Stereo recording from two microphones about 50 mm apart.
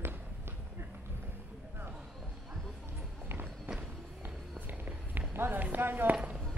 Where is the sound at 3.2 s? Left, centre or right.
Right.